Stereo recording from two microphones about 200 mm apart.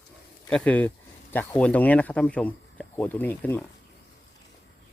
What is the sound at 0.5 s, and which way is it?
Speech, 5° left (ahead or behind).